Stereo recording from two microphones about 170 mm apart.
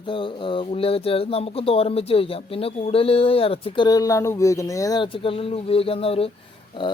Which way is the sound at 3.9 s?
20° left (ahead or behind).